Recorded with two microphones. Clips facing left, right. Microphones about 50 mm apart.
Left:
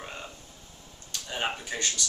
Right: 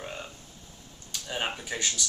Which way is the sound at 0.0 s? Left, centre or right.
Centre.